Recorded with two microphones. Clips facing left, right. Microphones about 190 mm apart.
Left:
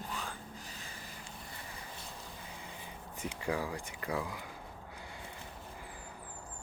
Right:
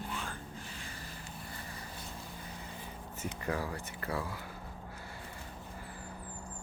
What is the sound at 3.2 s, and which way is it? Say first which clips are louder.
Speech: left 1 dB; 10° left (ahead or behind).